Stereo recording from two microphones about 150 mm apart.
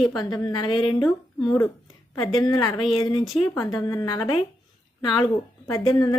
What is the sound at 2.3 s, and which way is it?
A woman's voice, 30° left (ahead or behind).